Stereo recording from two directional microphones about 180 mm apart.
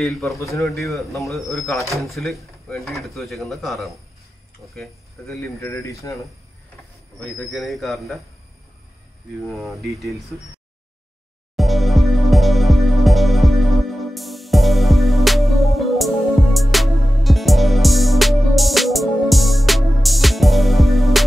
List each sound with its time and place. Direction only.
0.0 s speech: centre (ahead or behind)
0.4 s speech: 15° left (ahead or behind)
0.7 s speech: centre (ahead or behind)
5.4 s speech: 15° left (ahead or behind)
7.3 s speech: centre (ahead or behind)
9.5 s speech: centre (ahead or behind)
11.5 s music: centre (ahead or behind)